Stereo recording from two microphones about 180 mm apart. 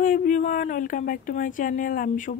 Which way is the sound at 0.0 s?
50° left (ahead or behind).